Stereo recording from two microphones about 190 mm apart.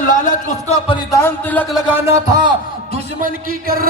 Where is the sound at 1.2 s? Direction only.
10° left (ahead or behind).